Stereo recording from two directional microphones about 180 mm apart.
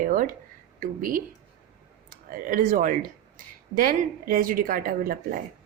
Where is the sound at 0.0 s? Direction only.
50° right (ahead or behind).